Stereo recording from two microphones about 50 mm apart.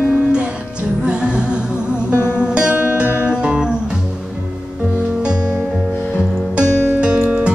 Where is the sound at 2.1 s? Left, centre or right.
Left.